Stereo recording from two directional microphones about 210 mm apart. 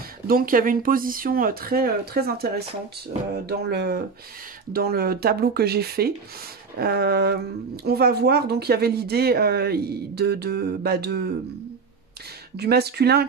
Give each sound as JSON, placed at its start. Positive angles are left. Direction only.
{"t": 0.3, "sound": "speech", "side_deg": -45}
{"t": 12.5, "sound": "speech", "side_deg": -50}